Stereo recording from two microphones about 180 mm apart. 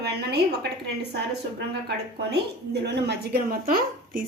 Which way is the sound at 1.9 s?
65° right (ahead or behind).